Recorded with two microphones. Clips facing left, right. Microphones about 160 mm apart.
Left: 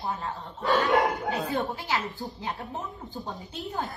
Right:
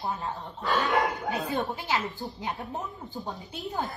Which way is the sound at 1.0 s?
Centre (ahead or behind).